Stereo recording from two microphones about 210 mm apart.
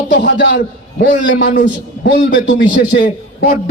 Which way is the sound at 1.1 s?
40° left (ahead or behind).